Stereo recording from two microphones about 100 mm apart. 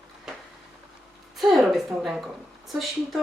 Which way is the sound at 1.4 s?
5° right (ahead or behind).